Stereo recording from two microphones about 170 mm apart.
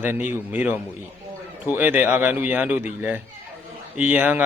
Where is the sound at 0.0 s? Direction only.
10° right (ahead or behind).